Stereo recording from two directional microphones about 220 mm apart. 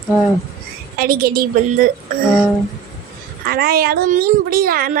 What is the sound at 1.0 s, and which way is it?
Speech, 40° right (ahead or behind).